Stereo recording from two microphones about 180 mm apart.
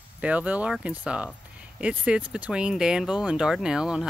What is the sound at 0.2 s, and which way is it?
Speech, 5° right (ahead or behind).